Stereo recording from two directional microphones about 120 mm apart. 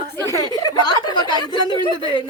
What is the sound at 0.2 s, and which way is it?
Speech, 25° left (ahead or behind).